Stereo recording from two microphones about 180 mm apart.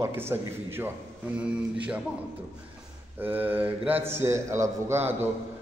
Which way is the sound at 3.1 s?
10° right (ahead or behind).